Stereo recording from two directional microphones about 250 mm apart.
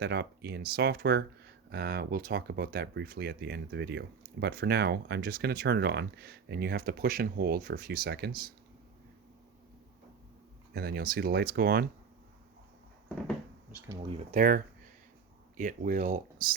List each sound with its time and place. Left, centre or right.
0.0 s speech: right
10.8 s speech: right
13.8 s speech: centre
14.3 s speech: right